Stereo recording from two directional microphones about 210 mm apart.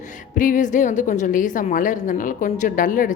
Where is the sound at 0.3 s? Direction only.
40° left (ahead or behind).